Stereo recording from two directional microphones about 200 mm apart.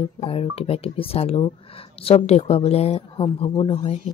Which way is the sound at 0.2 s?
30° left (ahead or behind).